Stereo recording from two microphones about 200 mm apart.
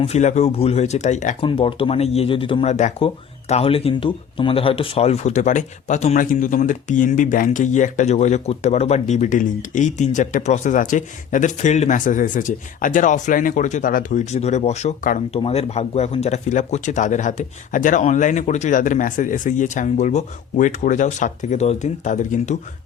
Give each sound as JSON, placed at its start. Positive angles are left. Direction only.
{"t": 0.0, "sound": "speech", "side_deg": 35}
{"t": 1.5, "sound": "speech", "side_deg": 25}